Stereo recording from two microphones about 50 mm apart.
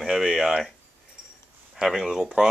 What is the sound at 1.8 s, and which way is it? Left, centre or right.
Speech, centre.